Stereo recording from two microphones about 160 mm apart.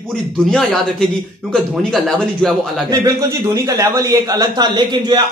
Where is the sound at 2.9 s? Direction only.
20° right (ahead or behind).